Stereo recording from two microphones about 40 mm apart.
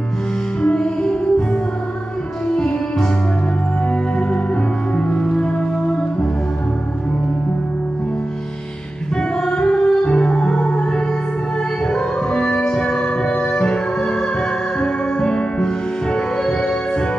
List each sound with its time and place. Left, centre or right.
0.6 s music: left
9.1 s music: left